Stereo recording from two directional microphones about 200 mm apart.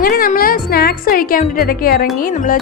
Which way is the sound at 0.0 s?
45° left (ahead or behind).